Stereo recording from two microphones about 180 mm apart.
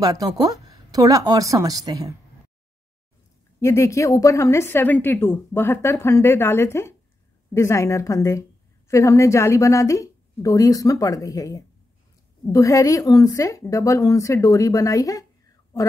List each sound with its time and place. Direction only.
0.0 s speech: 20° right (ahead or behind)
3.5 s a woman's voice: 15° left (ahead or behind)